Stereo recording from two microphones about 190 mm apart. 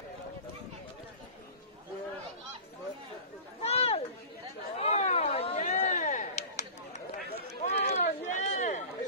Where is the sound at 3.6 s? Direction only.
35° left (ahead or behind).